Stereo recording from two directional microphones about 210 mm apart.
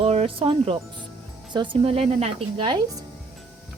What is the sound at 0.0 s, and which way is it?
A woman's voice, 30° right (ahead or behind).